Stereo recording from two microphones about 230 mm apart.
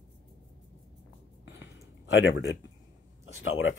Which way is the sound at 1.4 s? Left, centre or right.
Left.